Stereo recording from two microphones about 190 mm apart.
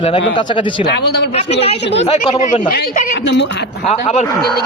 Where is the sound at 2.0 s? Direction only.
35° left (ahead or behind).